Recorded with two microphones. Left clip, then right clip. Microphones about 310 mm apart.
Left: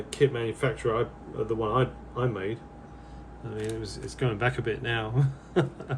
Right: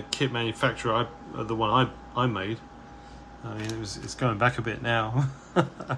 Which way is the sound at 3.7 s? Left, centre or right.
Centre.